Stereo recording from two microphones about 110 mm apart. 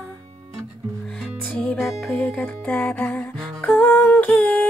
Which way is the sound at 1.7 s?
5° left (ahead or behind).